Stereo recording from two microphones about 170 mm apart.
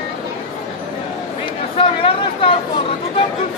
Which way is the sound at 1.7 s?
30° left (ahead or behind).